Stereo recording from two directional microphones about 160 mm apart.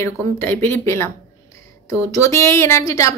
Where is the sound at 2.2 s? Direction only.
15° left (ahead or behind).